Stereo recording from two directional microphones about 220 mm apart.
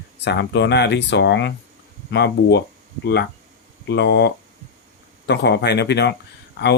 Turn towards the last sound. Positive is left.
turn(degrees=50)  # may be behind; listen again after turning